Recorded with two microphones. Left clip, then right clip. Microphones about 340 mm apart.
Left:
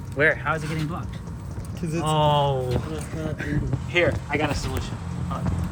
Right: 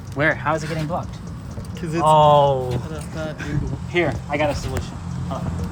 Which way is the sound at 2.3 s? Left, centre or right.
Centre.